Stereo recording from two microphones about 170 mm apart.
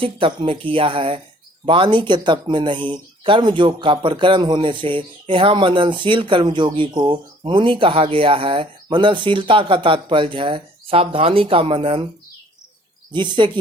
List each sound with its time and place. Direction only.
0.0 s speech: 30° right (ahead or behind)
13.1 s speech: 25° right (ahead or behind)